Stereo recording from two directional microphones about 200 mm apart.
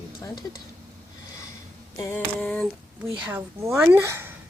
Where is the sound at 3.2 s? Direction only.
10° right (ahead or behind).